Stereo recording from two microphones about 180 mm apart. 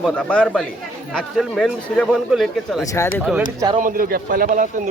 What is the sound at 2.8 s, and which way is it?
Speech, 15° left (ahead or behind).